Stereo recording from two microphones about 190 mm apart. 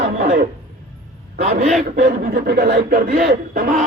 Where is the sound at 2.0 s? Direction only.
55° right (ahead or behind).